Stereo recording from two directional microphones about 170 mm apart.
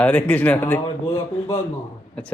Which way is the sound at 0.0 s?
10° left (ahead or behind).